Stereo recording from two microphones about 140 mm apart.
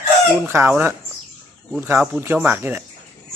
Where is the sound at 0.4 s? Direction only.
15° right (ahead or behind).